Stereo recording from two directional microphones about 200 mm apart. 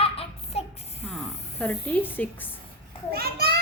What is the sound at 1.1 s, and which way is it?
Speech, 5° left (ahead or behind).